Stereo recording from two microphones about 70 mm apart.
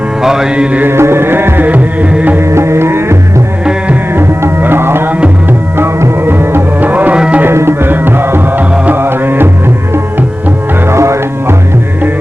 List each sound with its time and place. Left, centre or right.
0.2 s mantra: centre
0.9 s music: right
2.4 s music: right; by 7.4 s centre
7.4 s music: right
8.7 s music: right
9.0 s music: right
10.8 s music: right